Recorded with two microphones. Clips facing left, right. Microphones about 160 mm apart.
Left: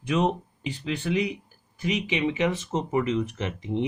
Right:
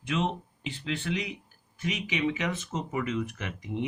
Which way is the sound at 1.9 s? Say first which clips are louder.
Left 4 dB; 30° left (ahead or behind).